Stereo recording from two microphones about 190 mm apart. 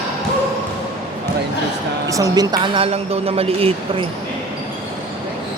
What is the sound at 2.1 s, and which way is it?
A woman's voice, 20° right (ahead or behind).